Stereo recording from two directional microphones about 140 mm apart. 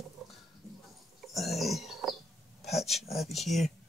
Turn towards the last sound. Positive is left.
turn(degrees=0)  # may be behind; listen again after turning